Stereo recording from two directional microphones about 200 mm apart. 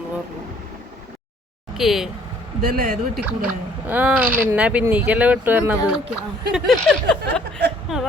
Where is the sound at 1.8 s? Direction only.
Centre (ahead or behind).